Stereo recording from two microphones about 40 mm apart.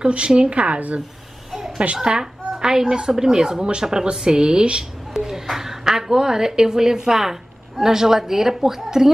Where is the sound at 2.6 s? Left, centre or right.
Centre.